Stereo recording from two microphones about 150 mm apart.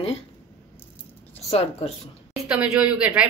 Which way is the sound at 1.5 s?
45° left (ahead or behind).